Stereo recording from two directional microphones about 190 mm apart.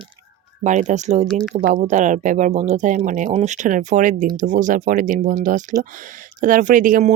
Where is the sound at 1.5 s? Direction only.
40° right (ahead or behind).